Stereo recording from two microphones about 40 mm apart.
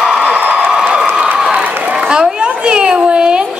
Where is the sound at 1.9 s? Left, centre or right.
Centre.